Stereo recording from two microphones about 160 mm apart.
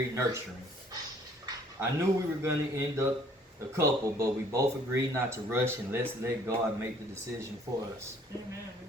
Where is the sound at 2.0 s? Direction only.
15° right (ahead or behind).